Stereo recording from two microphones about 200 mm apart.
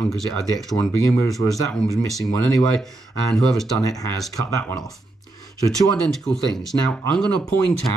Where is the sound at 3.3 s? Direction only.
Centre (ahead or behind).